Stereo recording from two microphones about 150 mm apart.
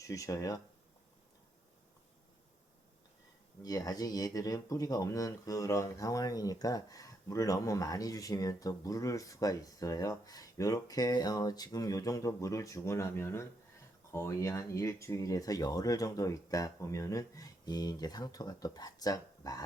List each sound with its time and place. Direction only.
0.0 s speech: 20° left (ahead or behind)
3.6 s speech: 25° left (ahead or behind)